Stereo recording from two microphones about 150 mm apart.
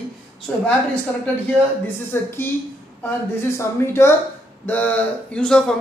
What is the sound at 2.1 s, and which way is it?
A woman's voice, 15° left (ahead or behind).